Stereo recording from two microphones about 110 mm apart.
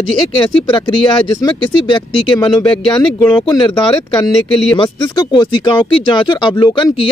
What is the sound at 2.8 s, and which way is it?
Speech, 10° left (ahead or behind).